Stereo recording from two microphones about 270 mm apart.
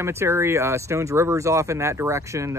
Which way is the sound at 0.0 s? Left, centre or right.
Centre.